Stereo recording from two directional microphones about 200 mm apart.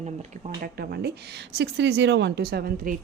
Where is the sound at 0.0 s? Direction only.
35° right (ahead or behind).